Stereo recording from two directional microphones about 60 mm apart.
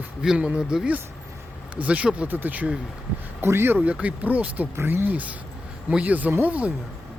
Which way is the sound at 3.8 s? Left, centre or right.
Right.